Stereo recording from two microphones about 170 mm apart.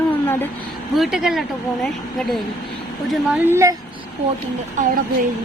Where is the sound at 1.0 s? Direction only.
Centre (ahead or behind).